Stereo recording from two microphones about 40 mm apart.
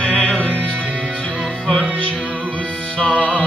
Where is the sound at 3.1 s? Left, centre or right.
Left.